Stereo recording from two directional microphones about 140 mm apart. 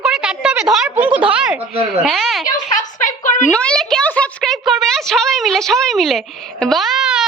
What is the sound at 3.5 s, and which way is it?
A woman's voice, 10° left (ahead or behind).